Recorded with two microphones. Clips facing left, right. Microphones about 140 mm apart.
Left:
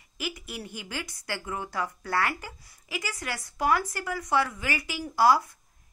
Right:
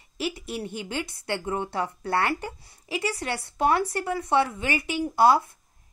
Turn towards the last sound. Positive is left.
turn(degrees=-25)  # may be behind; listen again after turning